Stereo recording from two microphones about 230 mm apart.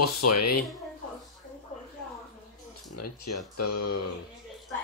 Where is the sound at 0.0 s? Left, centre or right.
Left.